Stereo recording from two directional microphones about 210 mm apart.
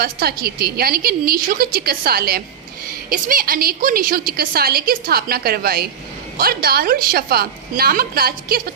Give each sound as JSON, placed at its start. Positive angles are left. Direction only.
{"t": 0.0, "sound": "a woman's voice", "side_deg": -45}